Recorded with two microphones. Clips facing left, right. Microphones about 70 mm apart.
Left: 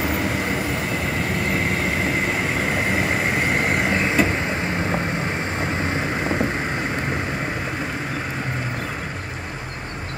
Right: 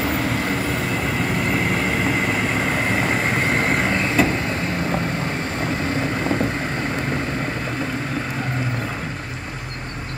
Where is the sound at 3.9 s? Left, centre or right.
Centre.